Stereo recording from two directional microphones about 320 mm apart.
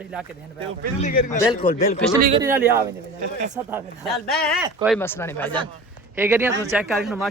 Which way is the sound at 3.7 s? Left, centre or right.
Centre.